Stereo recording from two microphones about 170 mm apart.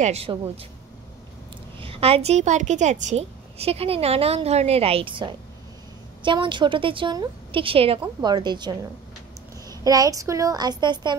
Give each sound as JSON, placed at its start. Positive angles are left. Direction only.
{"t": 0.0, "sound": "a woman's voice", "side_deg": -35}
{"t": 1.8, "sound": "a woman's voice", "side_deg": -35}